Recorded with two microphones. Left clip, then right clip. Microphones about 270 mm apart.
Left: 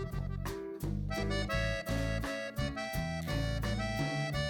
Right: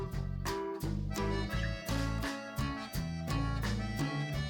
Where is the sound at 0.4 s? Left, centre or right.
Centre.